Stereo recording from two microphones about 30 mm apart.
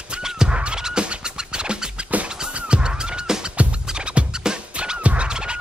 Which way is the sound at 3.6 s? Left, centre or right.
Right.